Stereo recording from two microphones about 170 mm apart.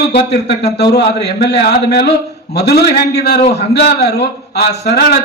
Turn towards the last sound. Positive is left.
turn(degrees=70)  # may be behind; listen again after turning